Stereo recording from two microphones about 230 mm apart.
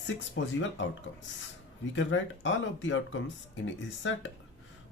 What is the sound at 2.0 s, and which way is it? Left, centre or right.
Speech, left.